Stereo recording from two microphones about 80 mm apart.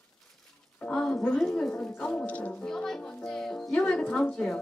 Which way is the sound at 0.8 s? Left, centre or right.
Centre.